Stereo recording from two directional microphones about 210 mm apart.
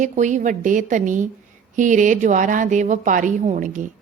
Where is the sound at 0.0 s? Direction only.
35° right (ahead or behind).